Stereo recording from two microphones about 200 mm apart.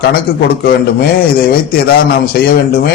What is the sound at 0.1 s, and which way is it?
Speech, 50° left (ahead or behind).